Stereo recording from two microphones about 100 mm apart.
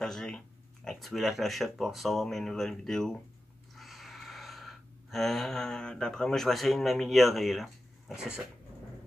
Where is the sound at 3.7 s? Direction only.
Centre (ahead or behind).